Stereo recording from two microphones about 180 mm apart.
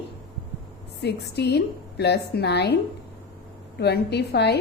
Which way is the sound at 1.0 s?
70° left (ahead or behind).